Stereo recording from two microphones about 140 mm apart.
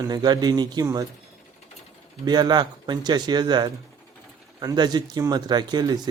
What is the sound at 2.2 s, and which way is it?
Speech, 30° right (ahead or behind).